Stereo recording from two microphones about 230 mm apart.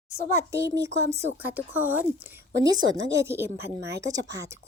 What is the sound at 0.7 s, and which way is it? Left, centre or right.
Speech, centre.